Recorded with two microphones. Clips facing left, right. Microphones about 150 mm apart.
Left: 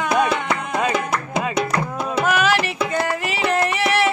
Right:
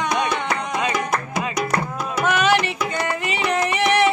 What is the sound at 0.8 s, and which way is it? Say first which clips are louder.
Music: left 2 dB; 25° left (ahead or behind).